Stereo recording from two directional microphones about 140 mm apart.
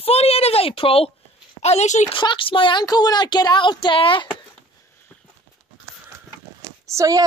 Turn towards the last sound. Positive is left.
turn(degrees=-25)  # may be behind; listen again after turning